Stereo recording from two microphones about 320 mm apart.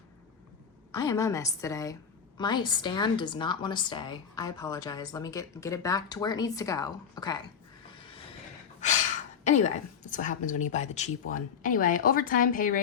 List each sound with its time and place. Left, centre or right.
0.9 s a woman's voice: centre
7.9 s vehicle: centre
9.4 s a woman's voice: left